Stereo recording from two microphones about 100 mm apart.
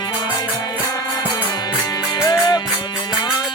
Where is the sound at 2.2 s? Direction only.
40° left (ahead or behind).